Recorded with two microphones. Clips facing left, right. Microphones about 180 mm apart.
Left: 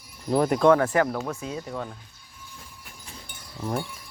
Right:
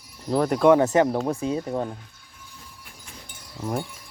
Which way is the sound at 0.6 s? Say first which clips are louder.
Right 4 dB; 20° right (ahead or behind).